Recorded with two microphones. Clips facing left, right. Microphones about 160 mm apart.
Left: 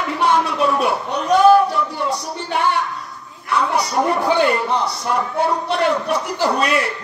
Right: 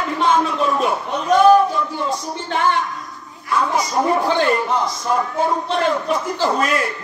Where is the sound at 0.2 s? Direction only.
70° left (ahead or behind).